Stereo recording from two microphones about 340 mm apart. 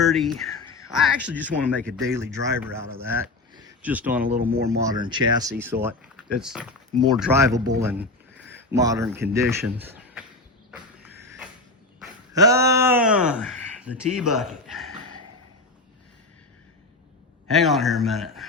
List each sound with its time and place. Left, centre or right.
0.0 s speech: centre
3.5 s a sound: centre
4.4 s speech: right
4.8 s speech: centre
10.7 s a sound: centre
11.9 s speech: centre
17.5 s speech: centre